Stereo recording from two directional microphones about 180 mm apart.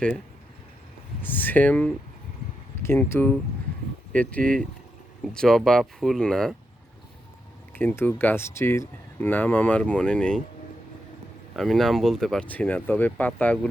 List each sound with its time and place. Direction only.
1.2 s speech: 10° left (ahead or behind)
7.7 s speech: 10° left (ahead or behind)
11.5 s speech: centre (ahead or behind)